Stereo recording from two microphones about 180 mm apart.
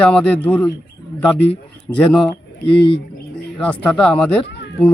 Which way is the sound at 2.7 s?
25° left (ahead or behind).